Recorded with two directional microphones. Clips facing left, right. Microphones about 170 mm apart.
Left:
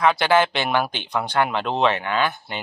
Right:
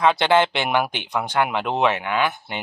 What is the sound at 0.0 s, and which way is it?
A man's voice, 20° right (ahead or behind).